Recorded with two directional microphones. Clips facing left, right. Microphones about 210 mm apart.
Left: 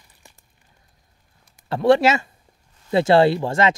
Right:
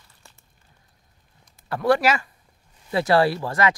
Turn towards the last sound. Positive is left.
turn(degrees=25)  # may be behind; listen again after turning